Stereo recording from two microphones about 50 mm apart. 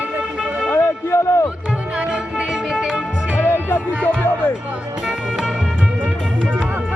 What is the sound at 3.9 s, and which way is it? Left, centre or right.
Speech, left.